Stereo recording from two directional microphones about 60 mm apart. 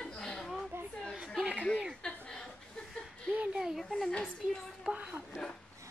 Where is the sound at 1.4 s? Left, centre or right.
Right.